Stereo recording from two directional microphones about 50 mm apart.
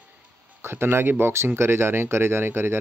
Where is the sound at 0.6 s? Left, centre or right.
Right.